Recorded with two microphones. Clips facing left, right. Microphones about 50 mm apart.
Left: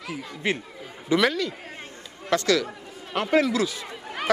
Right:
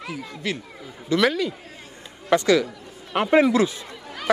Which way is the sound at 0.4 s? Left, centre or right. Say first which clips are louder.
Left 2 dB; left.